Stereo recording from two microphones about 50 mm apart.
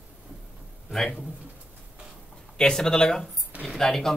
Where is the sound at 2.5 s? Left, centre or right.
Centre.